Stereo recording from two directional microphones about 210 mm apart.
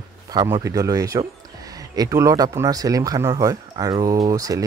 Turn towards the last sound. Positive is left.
turn(degrees=-15)  # may be behind; listen again after turning